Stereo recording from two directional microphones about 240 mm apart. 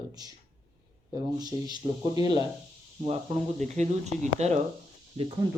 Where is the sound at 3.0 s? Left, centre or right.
Right.